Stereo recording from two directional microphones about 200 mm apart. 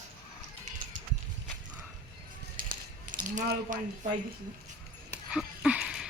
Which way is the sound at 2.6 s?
40° right (ahead or behind).